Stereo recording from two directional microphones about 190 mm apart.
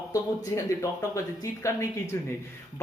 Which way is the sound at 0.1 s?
15° left (ahead or behind).